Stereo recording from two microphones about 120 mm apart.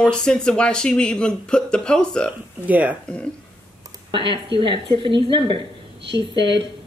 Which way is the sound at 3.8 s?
40° right (ahead or behind).